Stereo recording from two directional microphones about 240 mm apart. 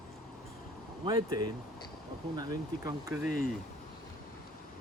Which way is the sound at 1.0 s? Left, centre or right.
Centre.